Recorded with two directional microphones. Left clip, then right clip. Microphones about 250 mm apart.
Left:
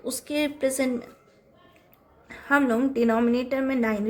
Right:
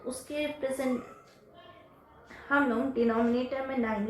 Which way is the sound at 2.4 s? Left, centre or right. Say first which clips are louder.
Left 5 dB; left.